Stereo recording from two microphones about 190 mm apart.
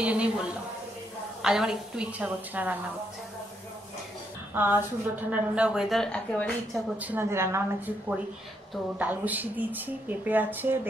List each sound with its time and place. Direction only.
0.0 s a woman's voice: 5° right (ahead or behind)
4.6 s a woman's voice: 10° right (ahead or behind)
7.0 s speech: 10° right (ahead or behind)